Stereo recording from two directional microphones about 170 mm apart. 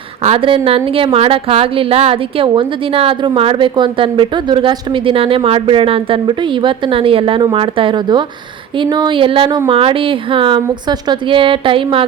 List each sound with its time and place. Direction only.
0.2 s a woman's voice: 35° right (ahead or behind)